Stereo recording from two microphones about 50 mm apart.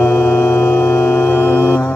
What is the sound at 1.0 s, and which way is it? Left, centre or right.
Music, left.